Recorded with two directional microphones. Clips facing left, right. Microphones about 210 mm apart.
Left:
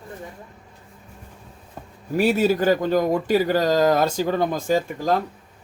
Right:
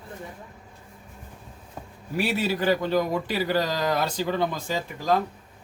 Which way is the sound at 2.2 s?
45° left (ahead or behind).